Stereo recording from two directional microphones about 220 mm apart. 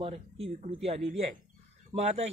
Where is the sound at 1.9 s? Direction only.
30° right (ahead or behind).